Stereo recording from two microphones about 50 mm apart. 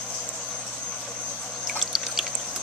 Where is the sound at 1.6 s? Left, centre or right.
Centre.